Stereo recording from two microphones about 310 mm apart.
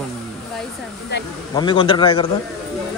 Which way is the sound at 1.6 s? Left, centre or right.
Centre.